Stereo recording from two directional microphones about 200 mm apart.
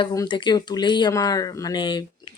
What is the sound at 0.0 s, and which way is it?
Speech, 20° left (ahead or behind).